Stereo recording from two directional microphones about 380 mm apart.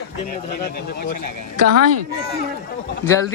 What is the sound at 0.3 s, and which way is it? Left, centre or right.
Speech, left.